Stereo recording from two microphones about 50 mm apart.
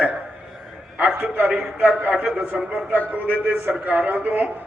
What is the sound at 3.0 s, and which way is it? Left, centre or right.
A man's voice, right.